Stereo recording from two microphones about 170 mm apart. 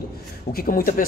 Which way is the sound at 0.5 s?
55° left (ahead or behind).